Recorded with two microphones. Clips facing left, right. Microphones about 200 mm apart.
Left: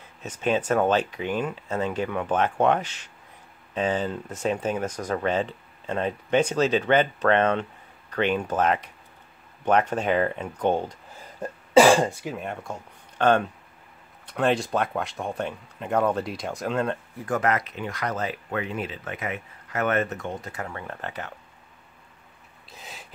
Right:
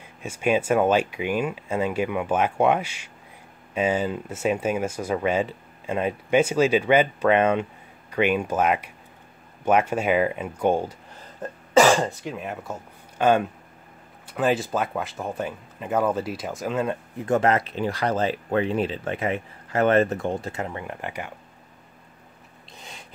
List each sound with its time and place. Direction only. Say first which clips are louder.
0.0 s speech: right 2 dB; 10° right (ahead or behind)
12.0 s speech: left 1 dB; 10° left (ahead or behind)
12.4 s speech: right 1 dB; 5° right (ahead or behind)
17.2 s speech: right 5 dB; 25° right (ahead or behind)
22.7 s a sound: even; 5° left (ahead or behind)